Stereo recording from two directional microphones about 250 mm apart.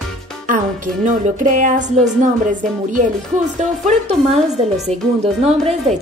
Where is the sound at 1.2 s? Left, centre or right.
Right.